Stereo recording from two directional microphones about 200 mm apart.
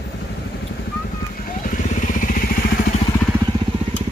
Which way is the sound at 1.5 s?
40° left (ahead or behind).